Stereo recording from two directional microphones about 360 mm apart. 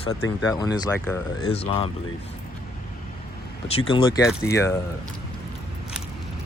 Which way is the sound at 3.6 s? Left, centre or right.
Centre.